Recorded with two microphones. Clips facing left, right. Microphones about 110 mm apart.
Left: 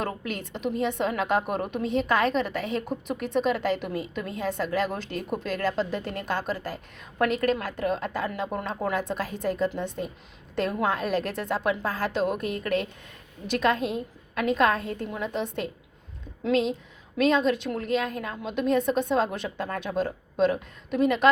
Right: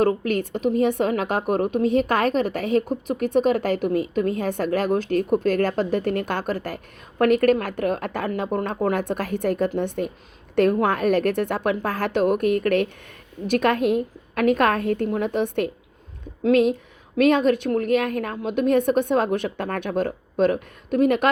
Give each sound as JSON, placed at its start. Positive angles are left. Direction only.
{"t": 0.0, "sound": "a woman's voice", "side_deg": -50}